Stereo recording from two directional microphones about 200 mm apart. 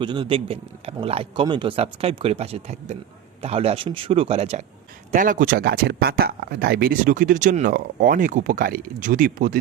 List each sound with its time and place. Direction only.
0.0 s speech: 25° right (ahead or behind)
5.1 s speech: 40° right (ahead or behind)